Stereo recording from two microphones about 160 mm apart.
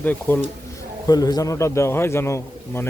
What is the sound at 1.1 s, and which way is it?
Speech, 25° left (ahead or behind).